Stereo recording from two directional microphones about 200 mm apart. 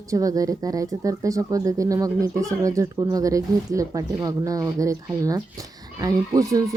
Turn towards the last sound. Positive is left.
turn(degrees=-15)  # may be behind; listen again after turning